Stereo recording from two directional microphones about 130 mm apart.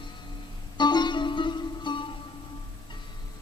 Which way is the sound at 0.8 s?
35° left (ahead or behind).